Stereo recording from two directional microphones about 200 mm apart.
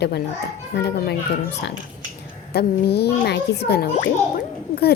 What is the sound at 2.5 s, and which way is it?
A woman's voice, 55° left (ahead or behind).